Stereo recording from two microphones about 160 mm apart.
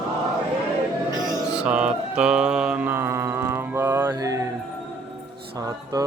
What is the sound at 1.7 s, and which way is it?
Mantra, 5° right (ahead or behind).